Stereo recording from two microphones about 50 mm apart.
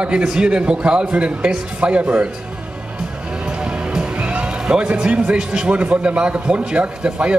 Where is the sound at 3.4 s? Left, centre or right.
Centre.